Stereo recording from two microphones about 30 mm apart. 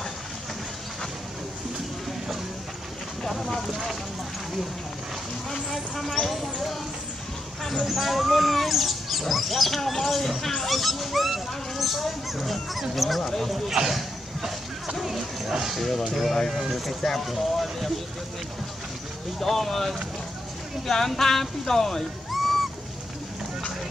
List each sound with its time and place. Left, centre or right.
5.7 s speech: centre
7.8 s speech: centre
13.2 s speech: centre
13.8 s a sound: centre
15.0 s speech: centre
16.1 s speech: centre
19.4 s speech: centre
22.3 s music: centre